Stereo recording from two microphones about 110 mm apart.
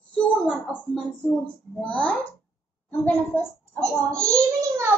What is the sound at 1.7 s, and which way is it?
A child's voice, 10° left (ahead or behind).